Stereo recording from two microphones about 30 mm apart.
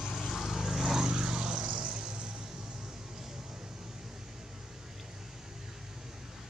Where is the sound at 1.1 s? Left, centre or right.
Right.